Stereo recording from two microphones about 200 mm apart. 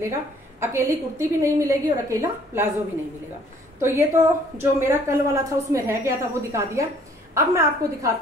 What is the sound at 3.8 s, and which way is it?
A woman's voice, 15° right (ahead or behind).